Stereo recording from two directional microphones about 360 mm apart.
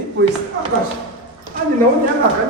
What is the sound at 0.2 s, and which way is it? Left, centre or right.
Speech, right.